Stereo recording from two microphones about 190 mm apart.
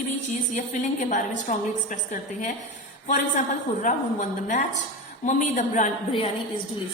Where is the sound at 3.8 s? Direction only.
40° left (ahead or behind).